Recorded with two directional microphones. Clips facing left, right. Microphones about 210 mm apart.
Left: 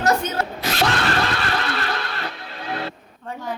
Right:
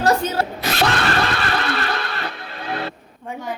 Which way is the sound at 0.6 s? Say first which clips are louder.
Even; 65° right (ahead or behind).